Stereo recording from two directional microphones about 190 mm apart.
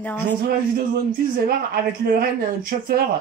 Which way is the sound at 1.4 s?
50° right (ahead or behind).